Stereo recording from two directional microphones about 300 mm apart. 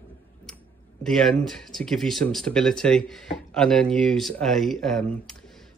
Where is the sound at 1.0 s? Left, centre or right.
Centre.